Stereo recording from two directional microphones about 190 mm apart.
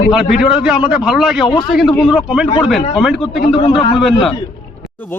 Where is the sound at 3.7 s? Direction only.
25° left (ahead or behind).